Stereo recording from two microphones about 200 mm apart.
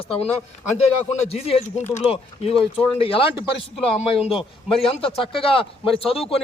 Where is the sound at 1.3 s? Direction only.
30° left (ahead or behind).